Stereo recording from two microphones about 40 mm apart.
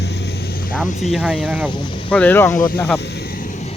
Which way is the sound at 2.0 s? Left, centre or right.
Left.